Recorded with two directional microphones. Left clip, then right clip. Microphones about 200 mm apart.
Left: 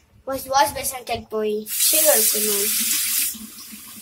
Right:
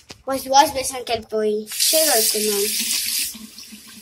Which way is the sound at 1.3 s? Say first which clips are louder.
Right 2 dB; 15° left (ahead or behind).